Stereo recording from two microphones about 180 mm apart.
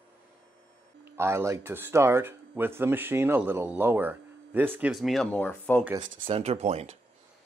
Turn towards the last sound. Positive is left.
turn(degrees=-35)  # may be behind; listen again after turning